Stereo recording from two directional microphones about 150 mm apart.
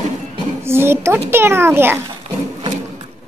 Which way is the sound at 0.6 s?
15° right (ahead or behind).